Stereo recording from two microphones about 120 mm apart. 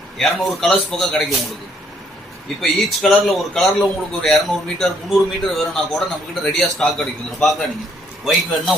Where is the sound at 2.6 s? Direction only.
Centre (ahead or behind).